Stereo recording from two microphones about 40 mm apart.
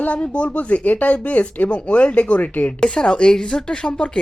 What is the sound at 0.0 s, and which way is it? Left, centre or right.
A woman's voice, left.